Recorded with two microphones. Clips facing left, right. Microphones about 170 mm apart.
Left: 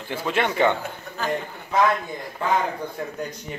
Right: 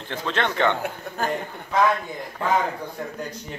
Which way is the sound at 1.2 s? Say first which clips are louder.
Even; 50° right (ahead or behind).